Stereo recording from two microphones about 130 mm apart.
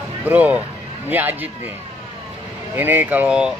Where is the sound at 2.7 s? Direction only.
15° right (ahead or behind).